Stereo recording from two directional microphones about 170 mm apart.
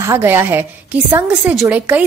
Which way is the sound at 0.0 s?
15° right (ahead or behind).